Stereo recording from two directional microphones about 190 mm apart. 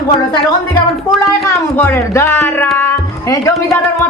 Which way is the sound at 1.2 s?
10° left (ahead or behind).